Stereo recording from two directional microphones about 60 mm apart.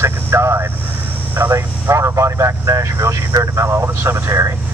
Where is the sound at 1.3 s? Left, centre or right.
Right.